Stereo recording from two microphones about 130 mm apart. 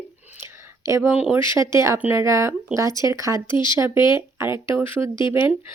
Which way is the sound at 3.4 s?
35° left (ahead or behind).